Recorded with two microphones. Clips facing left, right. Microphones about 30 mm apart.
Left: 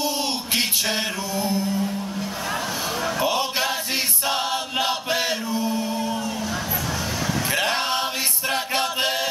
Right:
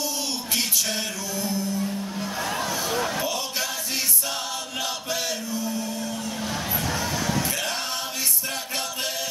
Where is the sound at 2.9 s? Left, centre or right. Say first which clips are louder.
Left 6 dB; left.